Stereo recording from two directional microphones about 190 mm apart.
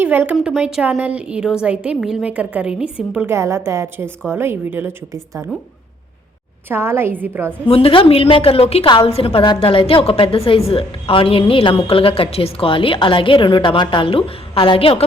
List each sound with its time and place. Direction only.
0.0 s a woman's voice: 10° right (ahead or behind)
6.7 s a woman's voice: 10° right (ahead or behind)
7.7 s a woman's voice: 30° left (ahead or behind)